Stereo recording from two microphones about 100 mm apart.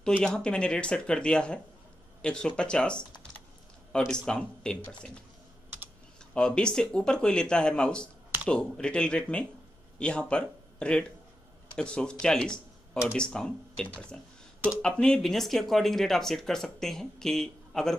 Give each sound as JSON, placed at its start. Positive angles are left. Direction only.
{"t": 0.0, "sound": "speech", "side_deg": 10}
{"t": 4.1, "sound": "speech", "side_deg": 5}
{"t": 6.3, "sound": "speech", "side_deg": 10}